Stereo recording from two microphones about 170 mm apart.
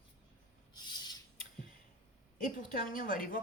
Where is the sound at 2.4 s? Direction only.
50° left (ahead or behind).